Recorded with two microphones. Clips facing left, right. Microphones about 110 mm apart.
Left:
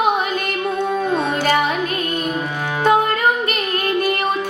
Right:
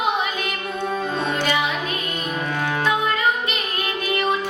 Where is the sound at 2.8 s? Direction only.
50° left (ahead or behind).